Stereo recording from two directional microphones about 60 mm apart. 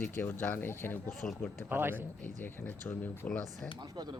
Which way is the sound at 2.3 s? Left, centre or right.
Left.